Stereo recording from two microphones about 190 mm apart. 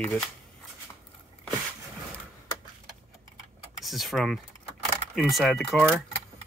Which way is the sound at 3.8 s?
Centre (ahead or behind).